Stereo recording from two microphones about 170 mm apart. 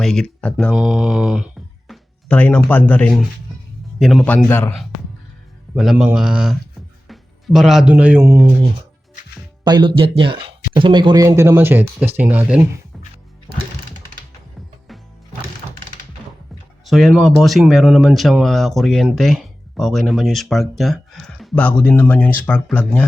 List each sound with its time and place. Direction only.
0.0 s a man's voice: 5° left (ahead or behind)
5.7 s speech: centre (ahead or behind)
9.6 s speech: 25° right (ahead or behind); by 12.6 s 10° right (ahead or behind)
16.8 s speech: centre (ahead or behind)